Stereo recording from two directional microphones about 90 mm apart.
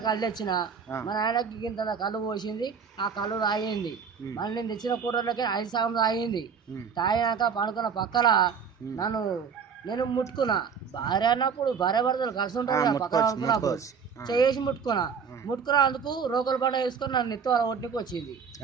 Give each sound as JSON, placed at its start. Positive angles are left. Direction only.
{"t": 0.0, "sound": "a man's voice", "side_deg": 50}
{"t": 14.3, "sound": "speech", "side_deg": 50}